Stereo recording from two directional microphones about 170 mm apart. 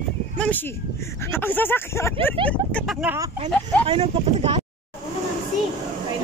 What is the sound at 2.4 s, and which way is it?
Speech, 5° left (ahead or behind).